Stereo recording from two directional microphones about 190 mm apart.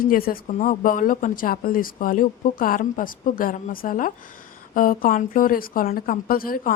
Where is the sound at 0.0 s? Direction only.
50° left (ahead or behind).